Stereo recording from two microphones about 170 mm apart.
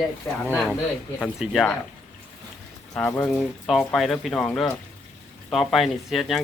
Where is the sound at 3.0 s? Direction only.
10° left (ahead or behind).